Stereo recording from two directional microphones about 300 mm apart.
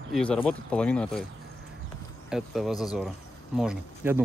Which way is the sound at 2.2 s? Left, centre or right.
Centre.